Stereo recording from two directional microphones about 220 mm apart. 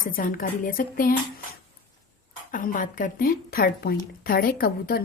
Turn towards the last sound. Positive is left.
turn(degrees=45)  # may be behind; listen again after turning